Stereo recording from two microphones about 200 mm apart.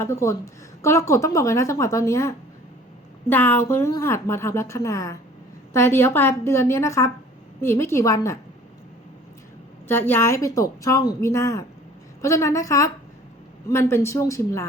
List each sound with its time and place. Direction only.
0.0 s a woman's voice: 15° left (ahead or behind)
9.9 s a woman's voice: 10° left (ahead or behind)